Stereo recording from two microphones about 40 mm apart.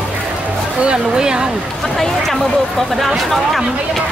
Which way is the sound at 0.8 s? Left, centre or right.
Right.